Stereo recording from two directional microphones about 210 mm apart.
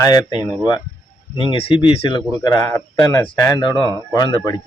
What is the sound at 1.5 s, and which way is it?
Speech, 25° left (ahead or behind).